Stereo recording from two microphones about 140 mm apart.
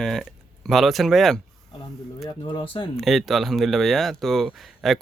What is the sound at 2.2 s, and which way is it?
Speech, 35° left (ahead or behind).